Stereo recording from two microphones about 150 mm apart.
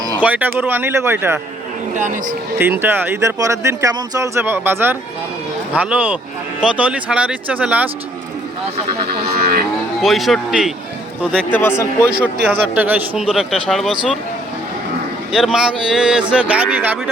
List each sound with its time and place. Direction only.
0.2 s speech: 10° right (ahead or behind)
2.0 s speech: 60° right (ahead or behind)
2.6 s speech: 15° right (ahead or behind)
9.0 s speech: 90° right
10.0 s speech: centre (ahead or behind)
11.3 s a man's voice: 15° left (ahead or behind)
12.5 s speech: 10° right (ahead or behind)
15.3 s speech: 5° right (ahead or behind)